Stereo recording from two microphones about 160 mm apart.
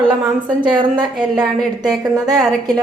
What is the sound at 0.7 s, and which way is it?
Speech, 30° right (ahead or behind).